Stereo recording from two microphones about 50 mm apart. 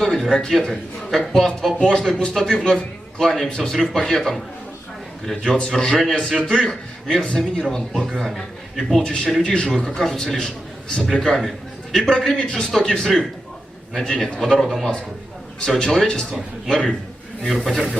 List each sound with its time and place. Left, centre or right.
0.0 s speech: centre
3.2 s a man's voice: centre
7.9 s a man's voice: centre
9.4 s speech: centre
11.3 s a sound: centre
11.9 s a man's voice: centre